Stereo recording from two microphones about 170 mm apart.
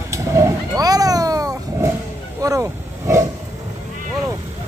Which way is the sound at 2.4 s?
20° right (ahead or behind).